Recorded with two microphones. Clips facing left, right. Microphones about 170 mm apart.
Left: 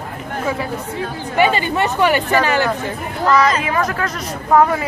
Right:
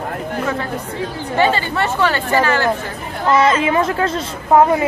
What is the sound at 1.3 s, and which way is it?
Speech, 15° left (ahead or behind).